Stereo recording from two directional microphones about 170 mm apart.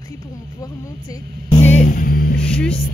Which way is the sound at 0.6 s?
20° left (ahead or behind).